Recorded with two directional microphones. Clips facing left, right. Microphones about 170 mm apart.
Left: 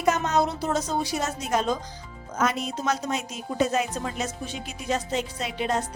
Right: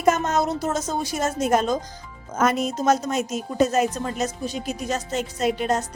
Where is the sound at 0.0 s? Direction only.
50° right (ahead or behind).